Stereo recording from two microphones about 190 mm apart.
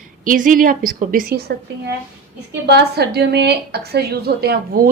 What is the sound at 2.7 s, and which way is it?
A woman's voice, 60° right (ahead or behind).